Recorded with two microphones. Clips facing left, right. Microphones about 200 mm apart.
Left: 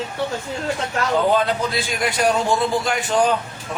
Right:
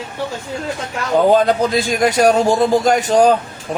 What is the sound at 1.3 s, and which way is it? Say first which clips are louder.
A man's voice: right 6 dB; 40° right (ahead or behind).